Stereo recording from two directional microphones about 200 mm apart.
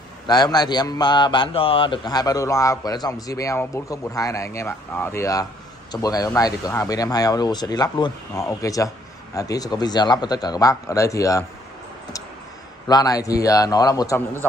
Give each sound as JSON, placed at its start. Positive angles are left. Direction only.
{"t": 0.3, "sound": "a man's voice", "side_deg": 20}
{"t": 12.8, "sound": "a man's voice", "side_deg": 20}